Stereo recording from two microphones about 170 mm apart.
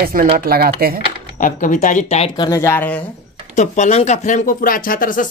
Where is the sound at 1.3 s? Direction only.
50° left (ahead or behind).